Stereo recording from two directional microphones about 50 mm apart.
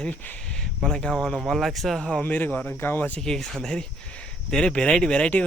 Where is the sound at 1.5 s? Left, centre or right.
Centre.